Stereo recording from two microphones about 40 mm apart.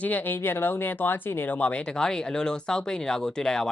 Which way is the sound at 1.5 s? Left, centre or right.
Left.